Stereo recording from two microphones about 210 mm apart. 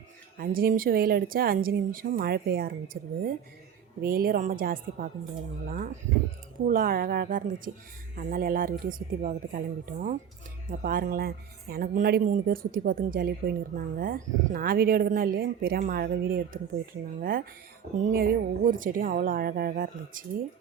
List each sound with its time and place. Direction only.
0.3 s a woman's voice: 45° right (ahead or behind)